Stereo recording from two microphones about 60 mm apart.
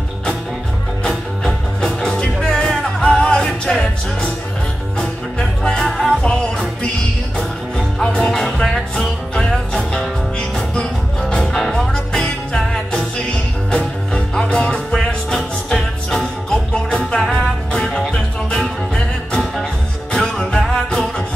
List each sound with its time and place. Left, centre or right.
1.0 s music: centre
4.9 s music: centre
7.3 s music: centre
9.3 s music: centre